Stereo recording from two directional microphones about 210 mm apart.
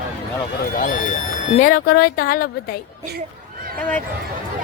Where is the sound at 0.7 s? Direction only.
40° left (ahead or behind).